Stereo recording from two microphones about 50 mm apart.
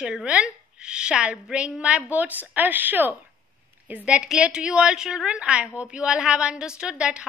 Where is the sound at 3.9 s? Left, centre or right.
Right.